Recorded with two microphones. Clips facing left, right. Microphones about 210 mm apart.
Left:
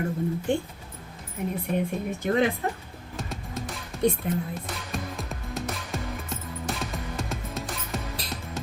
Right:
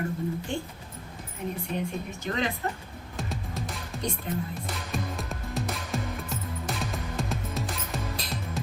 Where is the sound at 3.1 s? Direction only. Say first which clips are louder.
Even; centre (ahead or behind).